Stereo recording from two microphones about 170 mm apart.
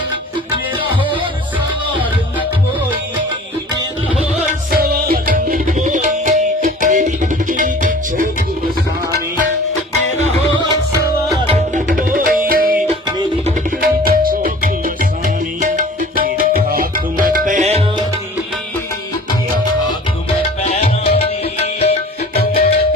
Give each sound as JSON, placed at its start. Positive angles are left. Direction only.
{"t": 4.7, "sound": "tabla", "side_deg": -60}
{"t": 11.4, "sound": "music", "side_deg": -35}
{"t": 11.9, "sound": "tabla", "side_deg": -55}
{"t": 13.7, "sound": "tabla", "side_deg": -55}
{"t": 15.2, "sound": "music", "side_deg": -50}
{"t": 20.6, "sound": "music", "side_deg": 40}
{"t": 22.4, "sound": "music", "side_deg": 65}